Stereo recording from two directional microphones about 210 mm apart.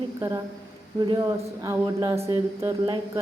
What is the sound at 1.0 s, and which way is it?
A woman's voice, 20° right (ahead or behind).